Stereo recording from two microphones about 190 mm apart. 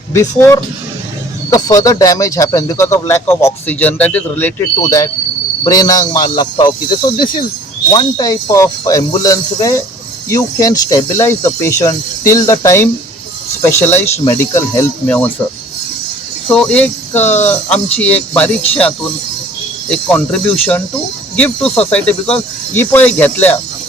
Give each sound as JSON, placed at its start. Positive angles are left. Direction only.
{"t": 0.1, "sound": "a man's voice", "side_deg": 15}
{"t": 16.5, "sound": "speech", "side_deg": 5}